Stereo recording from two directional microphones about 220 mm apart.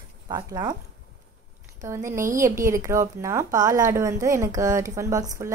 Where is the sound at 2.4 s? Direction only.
15° right (ahead or behind).